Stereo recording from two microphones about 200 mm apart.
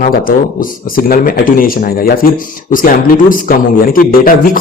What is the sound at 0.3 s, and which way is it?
A man's voice, 45° left (ahead or behind).